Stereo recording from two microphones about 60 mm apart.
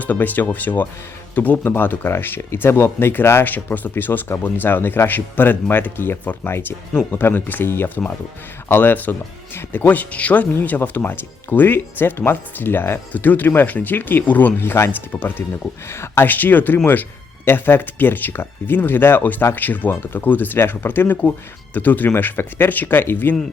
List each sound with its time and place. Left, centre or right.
0.0 s speech: left
15.9 s speech: left
16.2 s speech: left